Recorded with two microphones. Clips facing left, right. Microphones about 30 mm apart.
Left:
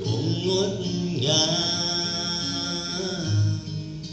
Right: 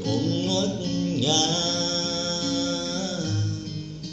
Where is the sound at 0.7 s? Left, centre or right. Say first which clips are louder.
Right 1 dB; left.